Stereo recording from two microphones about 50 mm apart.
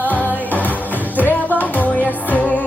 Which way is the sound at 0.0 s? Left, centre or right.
Left.